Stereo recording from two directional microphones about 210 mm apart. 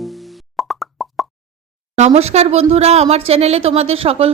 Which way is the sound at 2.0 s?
30° right (ahead or behind).